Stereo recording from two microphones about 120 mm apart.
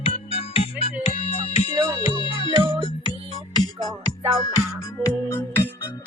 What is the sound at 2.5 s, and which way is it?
Music, 40° right (ahead or behind).